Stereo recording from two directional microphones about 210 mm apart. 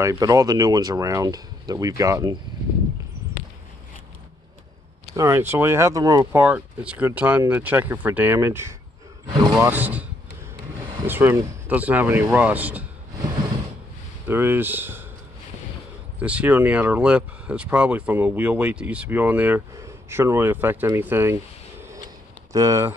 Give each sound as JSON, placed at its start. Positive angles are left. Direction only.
{"t": 0.0, "sound": "speech", "side_deg": -15}
{"t": 5.1, "sound": "speech", "side_deg": -15}
{"t": 11.1, "sound": "speech", "side_deg": -10}
{"t": 14.2, "sound": "speech", "side_deg": -10}
{"t": 16.2, "sound": "speech", "side_deg": -5}